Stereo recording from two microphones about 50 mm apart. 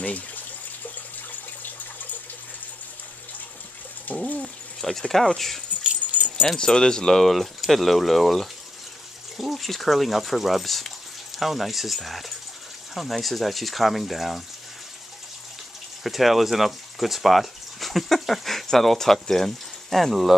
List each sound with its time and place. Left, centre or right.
0.0 s speech: left
4.4 s speech: centre
5.9 s keys jangling: right
6.6 s speech: centre
7.2 s speech: centre
16.0 s speech: centre